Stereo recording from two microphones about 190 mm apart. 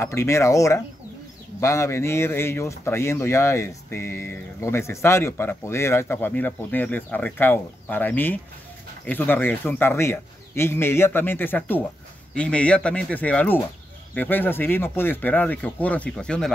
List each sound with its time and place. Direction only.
0.0 s speech: 15° left (ahead or behind)